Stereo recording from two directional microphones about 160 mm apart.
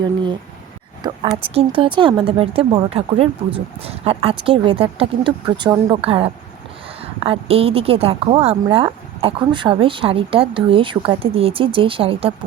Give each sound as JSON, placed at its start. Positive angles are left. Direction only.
{"t": 1.0, "sound": "a woman's voice", "side_deg": -30}